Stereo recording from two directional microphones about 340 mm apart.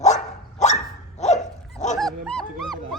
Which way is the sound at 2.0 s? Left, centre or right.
Centre.